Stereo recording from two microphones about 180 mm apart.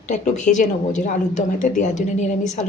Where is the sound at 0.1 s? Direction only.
45° left (ahead or behind).